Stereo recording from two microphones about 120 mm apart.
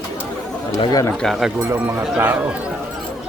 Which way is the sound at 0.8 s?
30° left (ahead or behind).